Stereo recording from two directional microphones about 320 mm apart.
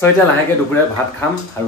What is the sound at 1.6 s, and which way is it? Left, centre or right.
Speech, centre.